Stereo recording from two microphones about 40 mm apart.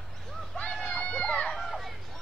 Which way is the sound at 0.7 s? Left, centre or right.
Centre.